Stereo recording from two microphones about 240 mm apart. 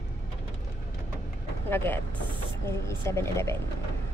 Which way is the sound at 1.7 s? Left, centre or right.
Centre.